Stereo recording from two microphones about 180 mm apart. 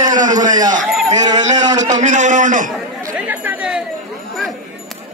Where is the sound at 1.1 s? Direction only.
20° right (ahead or behind).